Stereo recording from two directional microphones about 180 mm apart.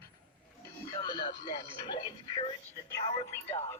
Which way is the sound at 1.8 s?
25° left (ahead or behind).